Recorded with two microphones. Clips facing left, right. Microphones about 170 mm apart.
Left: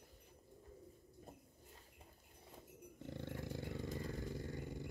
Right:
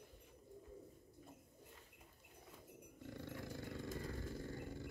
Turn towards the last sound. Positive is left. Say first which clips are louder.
# left 1 dB
turn(degrees=15)  # may be behind; listen again after turning